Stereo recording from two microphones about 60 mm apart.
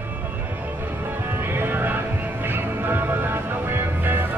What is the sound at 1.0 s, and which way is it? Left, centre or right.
Music, right.